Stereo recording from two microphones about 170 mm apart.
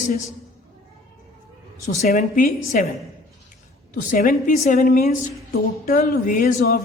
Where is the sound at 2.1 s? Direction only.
55° left (ahead or behind).